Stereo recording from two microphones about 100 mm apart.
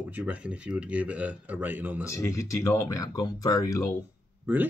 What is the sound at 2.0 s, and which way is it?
Speech, 30° left (ahead or behind).